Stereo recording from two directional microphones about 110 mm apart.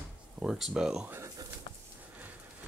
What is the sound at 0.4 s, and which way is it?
Speech, 5° right (ahead or behind).